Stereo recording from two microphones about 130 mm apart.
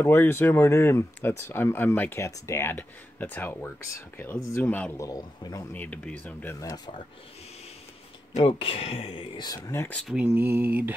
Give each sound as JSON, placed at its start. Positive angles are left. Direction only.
{"t": 0.0, "sound": "a man's voice", "side_deg": 15}
{"t": 4.6, "sound": "speech", "side_deg": 10}
{"t": 4.9, "sound": "a man's voice", "side_deg": 30}
{"t": 5.7, "sound": "speech", "side_deg": 10}
{"t": 8.5, "sound": "speech", "side_deg": 45}
{"t": 9.7, "sound": "a man's voice", "side_deg": 20}
{"t": 10.0, "sound": "mantra", "side_deg": -10}